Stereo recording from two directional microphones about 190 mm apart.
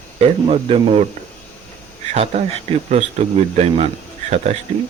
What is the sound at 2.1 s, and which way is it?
Speech, 35° right (ahead or behind).